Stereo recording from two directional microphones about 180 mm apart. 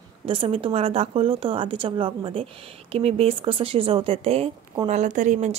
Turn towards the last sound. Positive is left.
turn(degrees=-40)  # may be behind; listen again after turning